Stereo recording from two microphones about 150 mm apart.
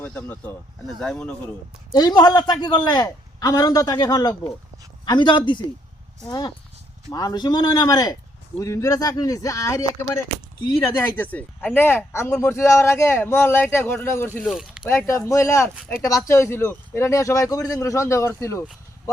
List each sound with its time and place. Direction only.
0.0 s speech: 10° left (ahead or behind)
1.9 s speech: 25° left (ahead or behind)
14.4 s speech: 5° right (ahead or behind)
14.8 s speech: 20° left (ahead or behind)